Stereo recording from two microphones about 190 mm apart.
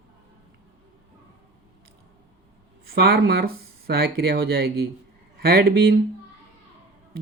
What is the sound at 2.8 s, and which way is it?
Speech, 55° right (ahead or behind).